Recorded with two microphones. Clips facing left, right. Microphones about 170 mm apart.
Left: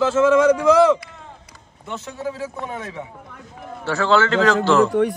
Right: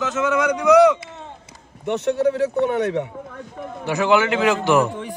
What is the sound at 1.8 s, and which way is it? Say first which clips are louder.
Speech: right 10 dB; 70° right (ahead or behind).